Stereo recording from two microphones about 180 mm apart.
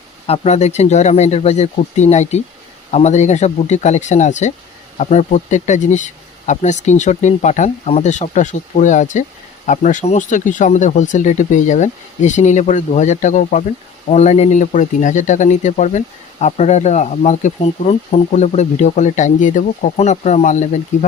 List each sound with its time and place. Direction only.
0.3 s speech: 40° left (ahead or behind)